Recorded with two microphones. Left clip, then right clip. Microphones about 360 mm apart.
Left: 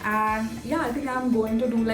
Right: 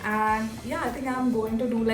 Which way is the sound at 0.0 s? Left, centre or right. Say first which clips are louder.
Left 1 dB; centre.